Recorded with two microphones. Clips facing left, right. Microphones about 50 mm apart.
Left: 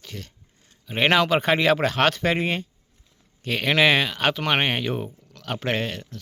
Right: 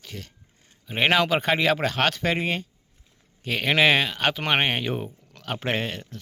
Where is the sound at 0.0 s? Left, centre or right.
Centre.